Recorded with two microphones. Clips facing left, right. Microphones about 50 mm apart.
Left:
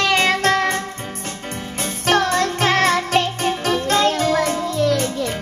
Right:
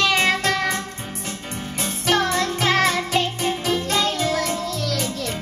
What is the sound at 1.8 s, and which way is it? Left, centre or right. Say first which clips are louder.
Music: left 3 dB; left.